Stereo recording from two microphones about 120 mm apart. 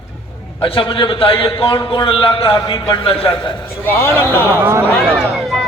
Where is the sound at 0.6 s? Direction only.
45° left (ahead or behind).